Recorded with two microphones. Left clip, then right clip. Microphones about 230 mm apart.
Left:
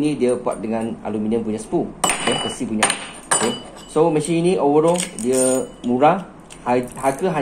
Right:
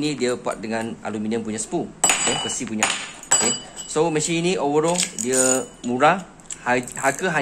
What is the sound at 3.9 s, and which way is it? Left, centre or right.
Speech, right.